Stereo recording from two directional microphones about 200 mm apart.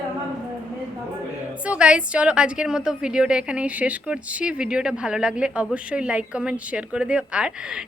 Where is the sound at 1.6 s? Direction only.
5° right (ahead or behind).